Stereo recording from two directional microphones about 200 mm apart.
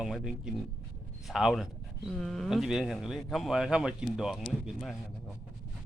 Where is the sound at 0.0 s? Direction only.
Centre (ahead or behind).